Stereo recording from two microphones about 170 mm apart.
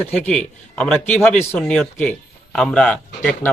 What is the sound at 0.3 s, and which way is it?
A man's voice, 5° left (ahead or behind).